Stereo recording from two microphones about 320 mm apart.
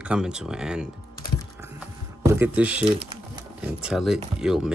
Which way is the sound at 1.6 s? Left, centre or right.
Centre.